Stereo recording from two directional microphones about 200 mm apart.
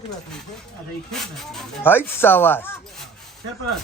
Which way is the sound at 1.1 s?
5° left (ahead or behind).